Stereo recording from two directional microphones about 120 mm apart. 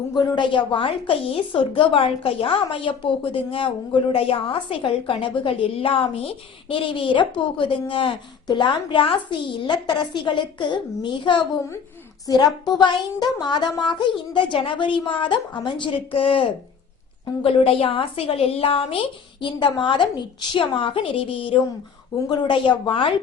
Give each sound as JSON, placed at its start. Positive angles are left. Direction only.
{"t": 0.1, "sound": "a woman's voice", "side_deg": 40}
{"t": 12.5, "sound": "a child's voice", "side_deg": 0}
{"t": 12.8, "sound": "a woman's voice", "side_deg": 40}